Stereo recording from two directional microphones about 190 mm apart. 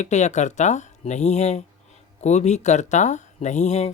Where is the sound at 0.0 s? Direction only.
40° left (ahead or behind).